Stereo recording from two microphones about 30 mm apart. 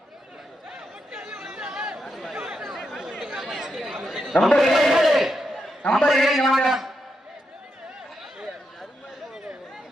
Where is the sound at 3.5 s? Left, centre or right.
Centre.